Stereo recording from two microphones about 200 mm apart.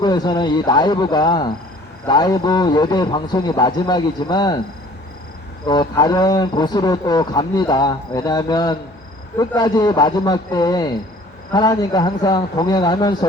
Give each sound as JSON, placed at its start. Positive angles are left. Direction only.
{"t": 0.0, "sound": "a man's voice", "side_deg": 20}
{"t": 5.6, "sound": "a man's voice", "side_deg": 20}